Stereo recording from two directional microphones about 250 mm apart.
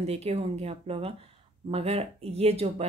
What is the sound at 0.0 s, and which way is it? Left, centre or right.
Speech, right.